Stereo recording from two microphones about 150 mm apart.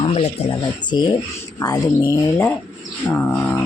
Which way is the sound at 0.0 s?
35° left (ahead or behind).